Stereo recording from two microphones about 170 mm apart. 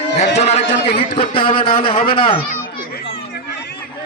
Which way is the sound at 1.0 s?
30° left (ahead or behind).